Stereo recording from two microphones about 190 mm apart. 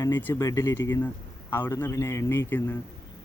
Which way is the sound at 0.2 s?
15° left (ahead or behind).